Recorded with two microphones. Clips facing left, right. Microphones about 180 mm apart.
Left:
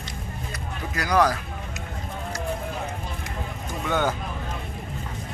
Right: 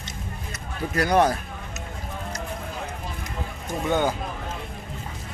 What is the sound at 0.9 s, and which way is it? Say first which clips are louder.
Speech: right 2 dB; 30° right (ahead or behind).